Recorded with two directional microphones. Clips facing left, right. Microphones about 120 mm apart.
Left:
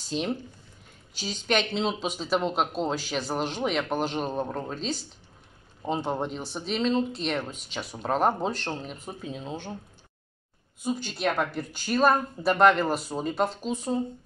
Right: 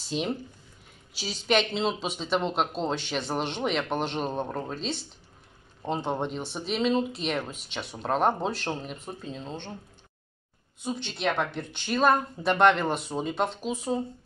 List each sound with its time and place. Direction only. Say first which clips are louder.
0.0 s speech: even; centre (ahead or behind)
10.8 s speech: left 2 dB; 5° left (ahead or behind)